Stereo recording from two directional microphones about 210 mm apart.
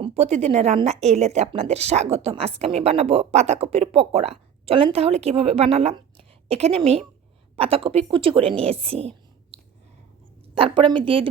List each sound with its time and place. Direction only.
0.0 s a woman's voice: 30° right (ahead or behind)
10.5 s a woman's voice: 25° right (ahead or behind)